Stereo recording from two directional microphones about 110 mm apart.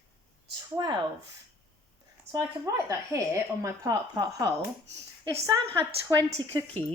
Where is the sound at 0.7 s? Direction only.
40° right (ahead or behind).